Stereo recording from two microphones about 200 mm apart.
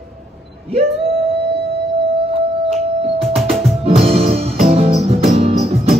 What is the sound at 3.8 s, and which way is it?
Music, 30° right (ahead or behind).